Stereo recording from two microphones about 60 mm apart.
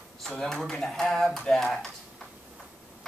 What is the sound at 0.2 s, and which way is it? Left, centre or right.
Speech, centre.